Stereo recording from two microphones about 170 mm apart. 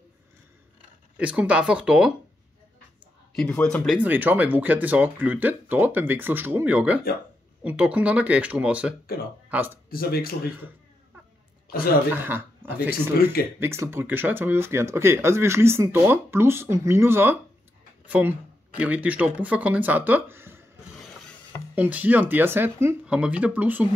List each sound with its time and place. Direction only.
1.1 s speech: 5° right (ahead or behind)
3.3 s speech: 5° left (ahead or behind)
9.0 s speech: 60° left (ahead or behind)
12.1 s speech: 15° right (ahead or behind)
13.1 s speech: 65° left (ahead or behind)
13.6 s speech: 15° right (ahead or behind)
21.7 s speech: 10° right (ahead or behind)